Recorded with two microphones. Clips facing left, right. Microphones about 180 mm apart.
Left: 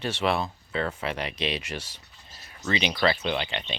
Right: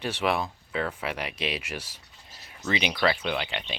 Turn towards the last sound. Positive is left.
turn(degrees=-5)  # may be behind; listen again after turning